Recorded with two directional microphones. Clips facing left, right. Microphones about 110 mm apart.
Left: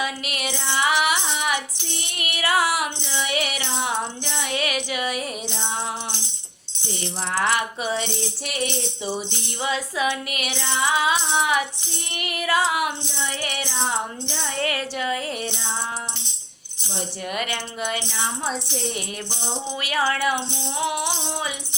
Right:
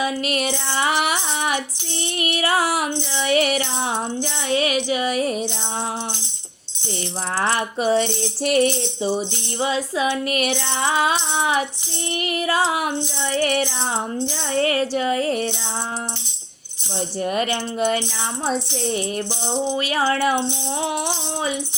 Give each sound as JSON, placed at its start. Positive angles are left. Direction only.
{"t": 0.0, "sound": "music", "side_deg": -35}
{"t": 4.4, "sound": "music", "side_deg": -30}
{"t": 7.3, "sound": "music", "side_deg": -35}
{"t": 9.0, "sound": "music", "side_deg": -30}
{"t": 11.3, "sound": "music", "side_deg": -30}
{"t": 17.2, "sound": "music", "side_deg": -35}
{"t": 19.7, "sound": "music", "side_deg": -30}